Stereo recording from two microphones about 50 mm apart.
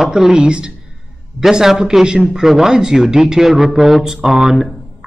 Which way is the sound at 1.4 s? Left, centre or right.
Centre.